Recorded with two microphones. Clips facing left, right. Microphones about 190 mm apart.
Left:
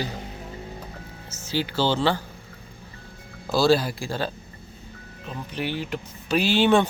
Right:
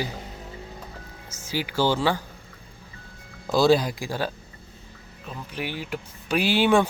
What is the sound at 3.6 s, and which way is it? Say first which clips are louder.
Speech: right 1 dB; 15° right (ahead or behind).